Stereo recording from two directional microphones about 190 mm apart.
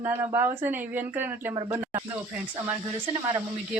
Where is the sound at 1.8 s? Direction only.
10° right (ahead or behind).